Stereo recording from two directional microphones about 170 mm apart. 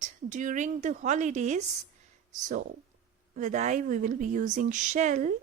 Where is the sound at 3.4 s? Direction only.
45° right (ahead or behind).